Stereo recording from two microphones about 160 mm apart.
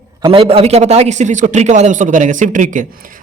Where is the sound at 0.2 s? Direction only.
35° right (ahead or behind).